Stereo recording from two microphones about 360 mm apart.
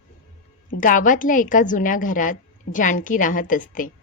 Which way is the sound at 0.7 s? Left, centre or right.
Left.